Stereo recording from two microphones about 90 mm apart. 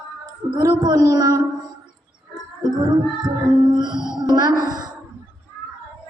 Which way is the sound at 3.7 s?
55° right (ahead or behind).